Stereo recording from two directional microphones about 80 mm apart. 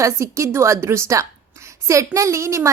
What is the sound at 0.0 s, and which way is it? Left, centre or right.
A woman's voice, right.